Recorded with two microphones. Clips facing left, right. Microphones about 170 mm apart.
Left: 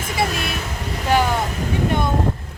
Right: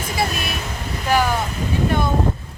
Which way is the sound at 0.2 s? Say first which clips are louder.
Left 1 dB; 25° left (ahead or behind).